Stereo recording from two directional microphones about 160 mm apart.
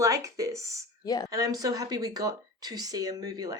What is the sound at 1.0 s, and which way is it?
Speech, 25° left (ahead or behind).